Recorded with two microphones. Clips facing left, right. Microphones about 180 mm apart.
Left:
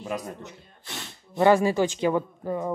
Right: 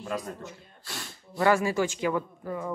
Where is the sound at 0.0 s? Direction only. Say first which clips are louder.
Left 1 dB; 20° left (ahead or behind).